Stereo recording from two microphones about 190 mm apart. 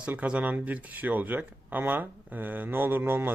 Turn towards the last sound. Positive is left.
turn(degrees=-10)  # may be behind; listen again after turning